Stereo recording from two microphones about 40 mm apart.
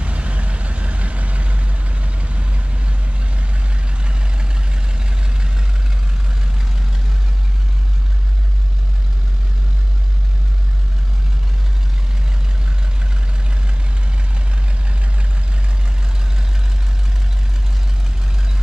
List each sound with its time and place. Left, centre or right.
0.0 s vehicle: right
4.0 s vehicle: right